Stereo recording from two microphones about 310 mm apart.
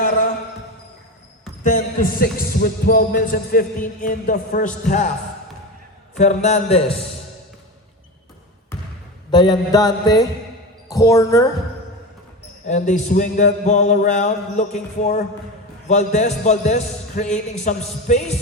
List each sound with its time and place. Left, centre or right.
1.6 s a man's voice: left
6.1 s a man's voice: left
9.3 s mantra: centre
10.8 s speech: centre
12.6 s a man's voice: left